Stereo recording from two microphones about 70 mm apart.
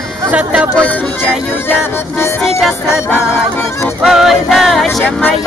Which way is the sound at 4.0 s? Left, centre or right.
Centre.